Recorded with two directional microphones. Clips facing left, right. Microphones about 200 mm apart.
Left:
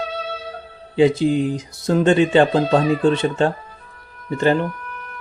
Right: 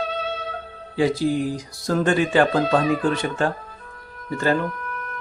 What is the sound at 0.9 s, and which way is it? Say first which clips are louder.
Speech: left 5 dB; 20° left (ahead or behind).